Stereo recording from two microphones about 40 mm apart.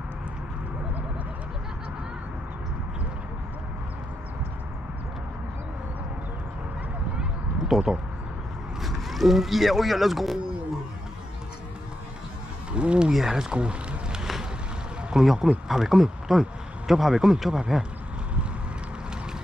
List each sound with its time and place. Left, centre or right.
7.6 s speech: centre
12.7 s speech: right
13.1 s speech: centre
13.5 s a sound: right
15.2 s speech: centre